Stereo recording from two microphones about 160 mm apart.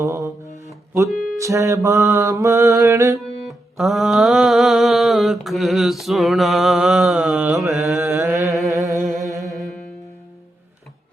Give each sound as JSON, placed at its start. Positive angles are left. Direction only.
{"t": 0.0, "sound": "mantra", "side_deg": -20}
{"t": 1.1, "sound": "music", "side_deg": 0}
{"t": 1.4, "sound": "mantra", "side_deg": -20}
{"t": 3.2, "sound": "music", "side_deg": 0}
{"t": 8.1, "sound": "mantra", "side_deg": -15}
{"t": 8.9, "sound": "a sound", "side_deg": 0}
{"t": 9.4, "sound": "music", "side_deg": 0}